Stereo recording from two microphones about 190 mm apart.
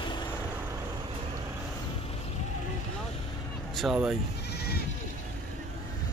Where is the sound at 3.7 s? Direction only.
Centre (ahead or behind).